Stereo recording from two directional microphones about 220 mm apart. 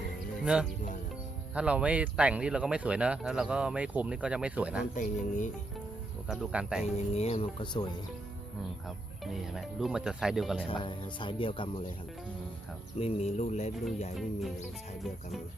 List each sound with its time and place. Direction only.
0.4 s speech: 5° right (ahead or behind)
4.9 s speech: 35° left (ahead or behind)
6.2 s speech: centre (ahead or behind)
6.8 s speech: 30° left (ahead or behind)
9.2 s speech: centre (ahead or behind)
10.7 s speech: 20° left (ahead or behind)
13.0 s speech: 30° left (ahead or behind)